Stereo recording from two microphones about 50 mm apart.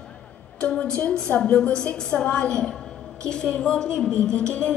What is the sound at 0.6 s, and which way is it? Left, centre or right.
A woman's voice, centre.